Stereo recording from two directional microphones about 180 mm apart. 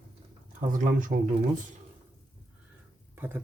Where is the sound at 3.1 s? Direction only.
10° right (ahead or behind).